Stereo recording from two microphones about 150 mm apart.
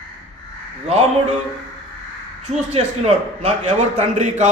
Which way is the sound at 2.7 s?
45° right (ahead or behind).